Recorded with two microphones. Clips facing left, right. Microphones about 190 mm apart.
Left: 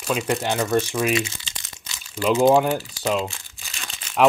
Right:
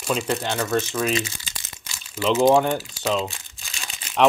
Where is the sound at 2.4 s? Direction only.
5° left (ahead or behind).